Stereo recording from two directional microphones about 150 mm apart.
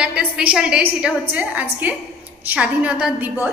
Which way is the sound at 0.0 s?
10° right (ahead or behind).